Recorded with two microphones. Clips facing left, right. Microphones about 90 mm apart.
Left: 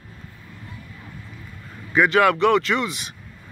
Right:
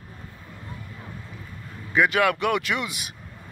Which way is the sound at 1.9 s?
Centre (ahead or behind).